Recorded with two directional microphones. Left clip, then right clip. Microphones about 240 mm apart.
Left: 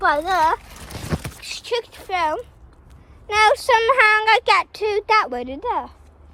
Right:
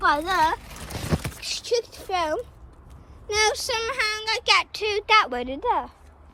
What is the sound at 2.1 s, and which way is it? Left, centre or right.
Speech, right.